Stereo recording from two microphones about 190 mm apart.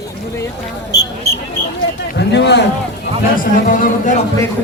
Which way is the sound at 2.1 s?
65° left (ahead or behind).